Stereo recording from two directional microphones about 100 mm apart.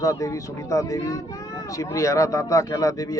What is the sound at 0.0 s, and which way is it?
Speech, 35° left (ahead or behind).